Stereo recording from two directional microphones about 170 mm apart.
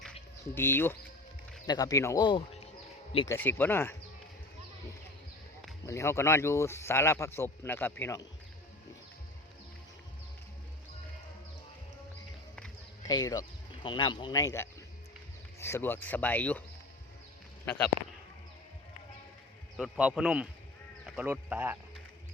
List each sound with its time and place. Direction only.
0.5 s speech: 10° left (ahead or behind)
1.6 s speech: 20° left (ahead or behind)
3.2 s speech: 15° left (ahead or behind)
5.8 s speech: 15° left (ahead or behind)
13.1 s speech: 25° left (ahead or behind)
17.7 s speech: 10° left (ahead or behind)
19.7 s speech: 5° right (ahead or behind)